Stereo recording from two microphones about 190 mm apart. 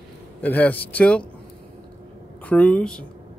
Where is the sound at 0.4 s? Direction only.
10° left (ahead or behind).